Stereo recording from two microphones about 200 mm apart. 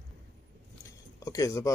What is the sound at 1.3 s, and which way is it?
Speech, 15° left (ahead or behind).